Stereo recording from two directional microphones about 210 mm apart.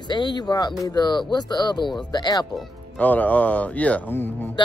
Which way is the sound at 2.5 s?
10° left (ahead or behind).